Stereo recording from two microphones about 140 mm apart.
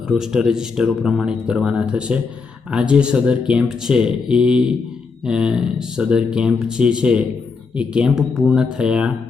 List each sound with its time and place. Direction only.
0.1 s speech: 5° right (ahead or behind)